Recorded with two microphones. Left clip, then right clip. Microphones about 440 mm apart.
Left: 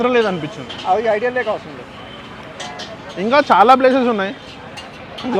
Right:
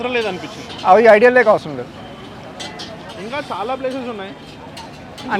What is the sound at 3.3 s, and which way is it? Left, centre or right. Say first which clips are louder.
Speech: left 13 dB; left.